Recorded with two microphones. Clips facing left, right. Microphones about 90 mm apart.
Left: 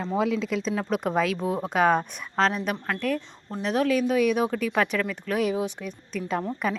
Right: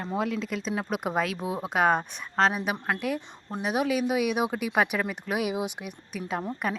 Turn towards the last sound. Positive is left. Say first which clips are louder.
# left 3 dB
turn(degrees=-5)  # may be behind; listen again after turning